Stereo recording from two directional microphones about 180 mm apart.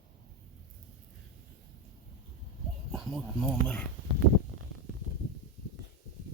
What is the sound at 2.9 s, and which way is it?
Speech, centre (ahead or behind).